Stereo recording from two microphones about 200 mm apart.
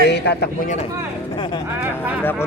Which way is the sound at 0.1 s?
55° left (ahead or behind).